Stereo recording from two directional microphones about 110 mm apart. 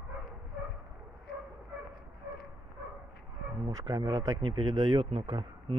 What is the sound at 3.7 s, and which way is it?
Speech, 35° right (ahead or behind).